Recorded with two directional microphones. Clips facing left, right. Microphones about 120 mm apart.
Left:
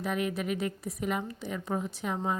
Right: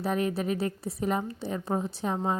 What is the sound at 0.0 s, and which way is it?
A woman's voice, 35° right (ahead or behind).